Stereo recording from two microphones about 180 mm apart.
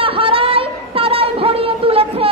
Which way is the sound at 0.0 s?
30° right (ahead or behind).